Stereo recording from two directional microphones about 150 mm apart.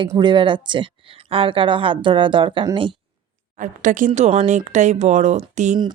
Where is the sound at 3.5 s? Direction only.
60° right (ahead or behind).